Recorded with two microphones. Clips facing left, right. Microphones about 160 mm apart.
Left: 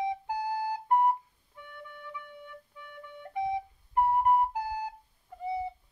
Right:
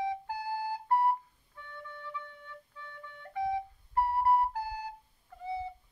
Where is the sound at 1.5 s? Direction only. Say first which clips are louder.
Even; 15° left (ahead or behind).